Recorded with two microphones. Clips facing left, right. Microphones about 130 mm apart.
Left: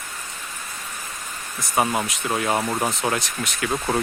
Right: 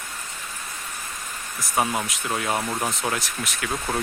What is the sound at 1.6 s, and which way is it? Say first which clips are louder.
Speech: left 2 dB; 5° left (ahead or behind).